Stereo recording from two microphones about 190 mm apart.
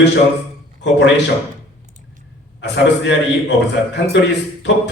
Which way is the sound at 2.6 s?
65° left (ahead or behind).